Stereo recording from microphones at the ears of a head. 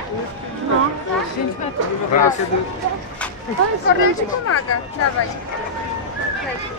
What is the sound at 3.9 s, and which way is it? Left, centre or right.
Speech, left.